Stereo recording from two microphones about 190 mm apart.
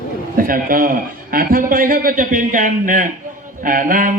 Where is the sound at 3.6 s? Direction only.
45° right (ahead or behind).